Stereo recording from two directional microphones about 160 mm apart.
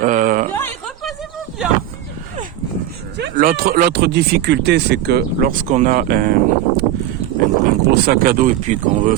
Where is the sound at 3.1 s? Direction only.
75° right (ahead or behind).